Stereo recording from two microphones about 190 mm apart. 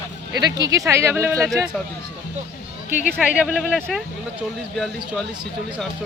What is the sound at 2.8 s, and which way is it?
Speech, 45° left (ahead or behind).